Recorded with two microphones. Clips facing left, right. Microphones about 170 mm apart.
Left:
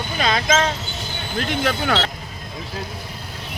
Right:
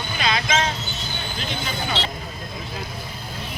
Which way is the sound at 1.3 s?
75° left (ahead or behind).